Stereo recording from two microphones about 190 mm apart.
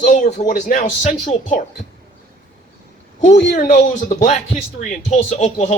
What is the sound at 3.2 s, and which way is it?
Speech, 40° left (ahead or behind).